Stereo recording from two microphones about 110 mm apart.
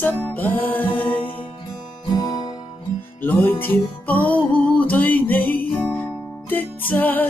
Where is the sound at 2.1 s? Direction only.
35° left (ahead or behind).